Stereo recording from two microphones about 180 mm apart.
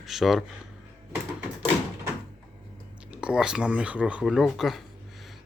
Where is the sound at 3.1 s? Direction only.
5° right (ahead or behind).